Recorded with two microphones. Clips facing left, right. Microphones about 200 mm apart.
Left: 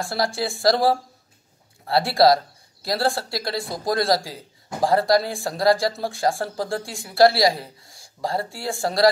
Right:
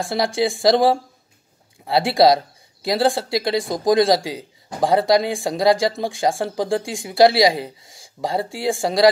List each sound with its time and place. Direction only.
0.0 s speech: centre (ahead or behind)
1.9 s speech: centre (ahead or behind)
7.5 s speech: 90° right
7.9 s speech: centre (ahead or behind)